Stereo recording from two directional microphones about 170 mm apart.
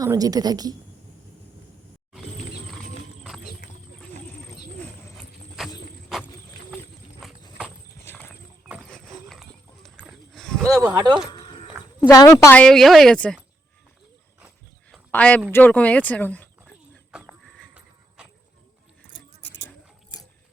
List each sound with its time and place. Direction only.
0.0 s a woman's voice: 20° right (ahead or behind)
5.1 s a sound: centre (ahead or behind)
7.2 s clip-clop: centre (ahead or behind)
8.0 s clip-clop: 10° left (ahead or behind)
8.6 s clip-clop: 5° right (ahead or behind)
9.3 s horse: centre (ahead or behind)
10.7 s a woman's voice: 20° right (ahead or behind)
11.3 s a sound: 30° left (ahead or behind)
12.0 s speech: 20° left (ahead or behind)
14.8 s a sound: 5° left (ahead or behind)
15.5 s speech: 10° left (ahead or behind)
17.1 s dog: 5° right (ahead or behind)
19.6 s gears: 20° left (ahead or behind)